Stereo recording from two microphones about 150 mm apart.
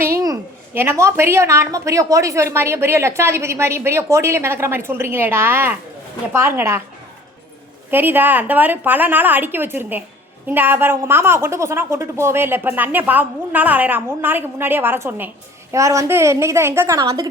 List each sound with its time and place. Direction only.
0.7 s a woman's voice: 15° right (ahead or behind)
7.9 s a woman's voice: 15° right (ahead or behind)